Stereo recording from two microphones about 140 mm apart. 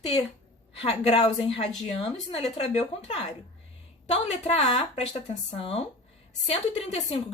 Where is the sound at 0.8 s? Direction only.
45° left (ahead or behind).